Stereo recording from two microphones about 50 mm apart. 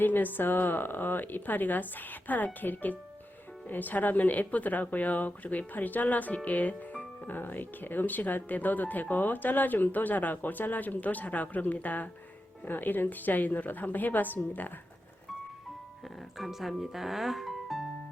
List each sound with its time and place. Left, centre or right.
0.0 s speech: left
16.4 s speech: centre